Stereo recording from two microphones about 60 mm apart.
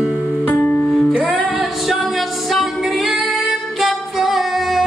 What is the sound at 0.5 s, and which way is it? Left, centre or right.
Music, left.